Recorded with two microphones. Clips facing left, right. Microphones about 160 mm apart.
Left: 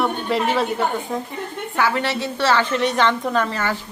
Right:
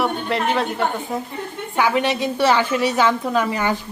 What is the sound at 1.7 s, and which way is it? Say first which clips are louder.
A woman's voice: right 2 dB; 15° right (ahead or behind).